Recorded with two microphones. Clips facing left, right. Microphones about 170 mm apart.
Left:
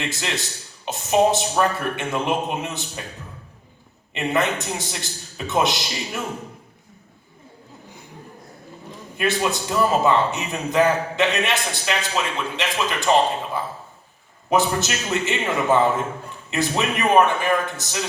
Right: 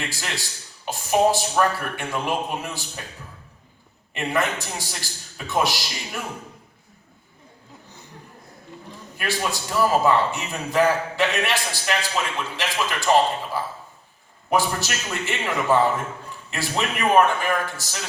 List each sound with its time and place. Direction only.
0.1 s a man's voice: 20° left (ahead or behind)
4.1 s a man's voice: 20° left (ahead or behind)
9.1 s a man's voice: 20° left (ahead or behind)
14.5 s a man's voice: 20° left (ahead or behind)